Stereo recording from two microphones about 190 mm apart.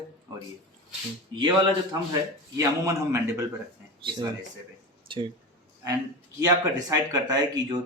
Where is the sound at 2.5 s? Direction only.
15° right (ahead or behind).